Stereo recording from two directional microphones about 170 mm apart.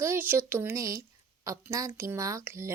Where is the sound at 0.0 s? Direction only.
15° right (ahead or behind).